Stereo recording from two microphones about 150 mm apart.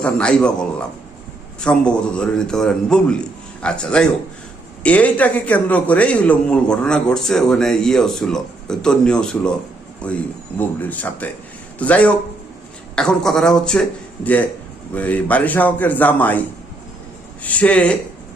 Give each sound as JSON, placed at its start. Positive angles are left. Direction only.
{"t": 0.0, "sound": "a man's voice", "side_deg": 5}
{"t": 14.9, "sound": "a man's voice", "side_deg": 10}
{"t": 17.4, "sound": "a man's voice", "side_deg": 10}